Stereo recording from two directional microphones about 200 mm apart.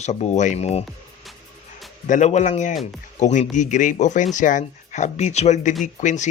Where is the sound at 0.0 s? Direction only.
35° left (ahead or behind).